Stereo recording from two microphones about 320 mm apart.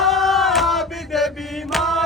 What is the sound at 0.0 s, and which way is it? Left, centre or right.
Chant, centre.